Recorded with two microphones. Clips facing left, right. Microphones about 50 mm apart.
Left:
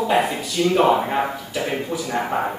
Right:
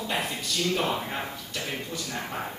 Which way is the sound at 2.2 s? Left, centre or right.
Left.